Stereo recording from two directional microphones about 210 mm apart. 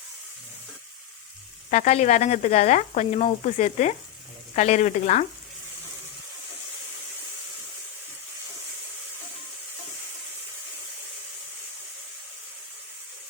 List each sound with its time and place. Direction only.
1.7 s sizzle: 35° left (ahead or behind)